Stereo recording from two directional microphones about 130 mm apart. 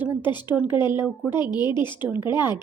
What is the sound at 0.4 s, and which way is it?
Speech, 10° right (ahead or behind).